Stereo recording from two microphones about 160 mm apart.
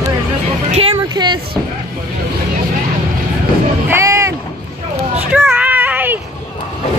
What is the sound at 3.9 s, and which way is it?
Music, 15° right (ahead or behind).